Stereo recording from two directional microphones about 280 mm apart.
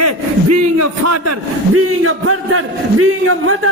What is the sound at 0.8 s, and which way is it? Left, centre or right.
A man's voice, right.